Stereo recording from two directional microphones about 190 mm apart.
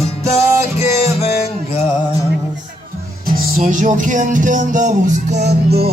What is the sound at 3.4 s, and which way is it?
Music, 45° right (ahead or behind).